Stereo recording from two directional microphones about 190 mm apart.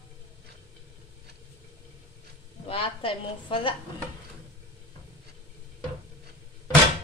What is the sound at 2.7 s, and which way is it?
A woman's voice, 30° left (ahead or behind).